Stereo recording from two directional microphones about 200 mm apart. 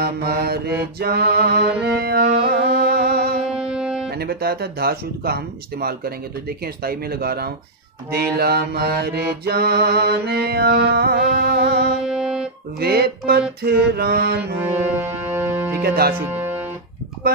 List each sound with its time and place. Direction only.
0.0 s mantra: 50° right (ahead or behind)
0.9 s music: 50° right (ahead or behind)
3.5 s music: 5° right (ahead or behind)
4.2 s mantra: 50° right (ahead or behind)
12.0 s music: 5° right (ahead or behind)
12.8 s mantra: 50° right (ahead or behind)
14.6 s music: 10° right (ahead or behind)
15.8 s mantra: 50° right (ahead or behind)
16.2 s music: 10° right (ahead or behind)